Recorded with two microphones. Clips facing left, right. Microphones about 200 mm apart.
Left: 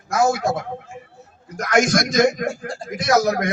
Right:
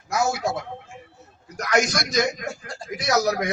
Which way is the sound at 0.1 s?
50° left (ahead or behind).